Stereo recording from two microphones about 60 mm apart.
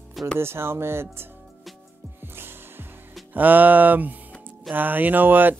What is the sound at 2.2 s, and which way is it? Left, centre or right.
Music, right.